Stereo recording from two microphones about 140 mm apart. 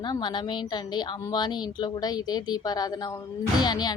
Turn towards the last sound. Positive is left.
turn(degrees=30)  # may be behind; listen again after turning